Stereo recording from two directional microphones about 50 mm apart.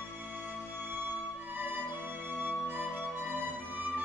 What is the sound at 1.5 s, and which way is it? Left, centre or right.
Music, right.